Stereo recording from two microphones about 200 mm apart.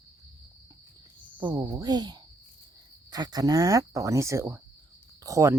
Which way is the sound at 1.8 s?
20° right (ahead or behind).